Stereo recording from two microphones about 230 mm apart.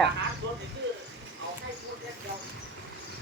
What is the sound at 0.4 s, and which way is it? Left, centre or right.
Bow-wow, right.